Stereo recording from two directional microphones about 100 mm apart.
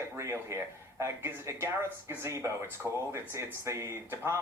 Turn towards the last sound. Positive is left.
turn(degrees=-30)  # may be behind; listen again after turning